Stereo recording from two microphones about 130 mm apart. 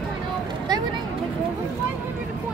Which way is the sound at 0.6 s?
30° right (ahead or behind).